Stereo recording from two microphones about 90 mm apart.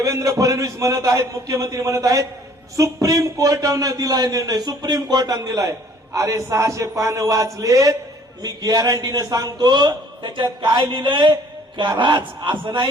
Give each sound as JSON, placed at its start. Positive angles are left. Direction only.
{"t": 0.0, "sound": "a man's voice", "side_deg": -35}